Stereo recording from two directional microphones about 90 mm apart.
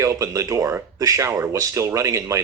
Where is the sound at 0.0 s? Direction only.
35° right (ahead or behind).